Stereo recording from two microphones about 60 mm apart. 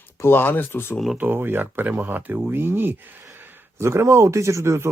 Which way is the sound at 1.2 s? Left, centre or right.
Right.